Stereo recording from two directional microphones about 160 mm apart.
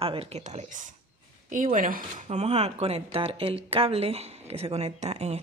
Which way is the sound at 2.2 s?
45° right (ahead or behind).